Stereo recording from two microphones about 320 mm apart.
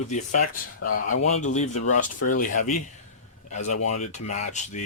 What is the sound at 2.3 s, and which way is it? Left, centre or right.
Speech, left.